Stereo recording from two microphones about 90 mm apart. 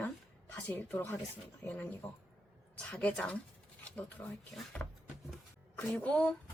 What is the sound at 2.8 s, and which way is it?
Speech, 10° left (ahead or behind).